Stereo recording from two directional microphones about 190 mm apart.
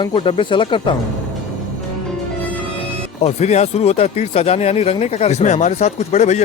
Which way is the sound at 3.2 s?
35° left (ahead or behind).